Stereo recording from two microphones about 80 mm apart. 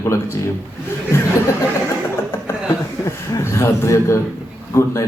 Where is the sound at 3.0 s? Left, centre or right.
Left.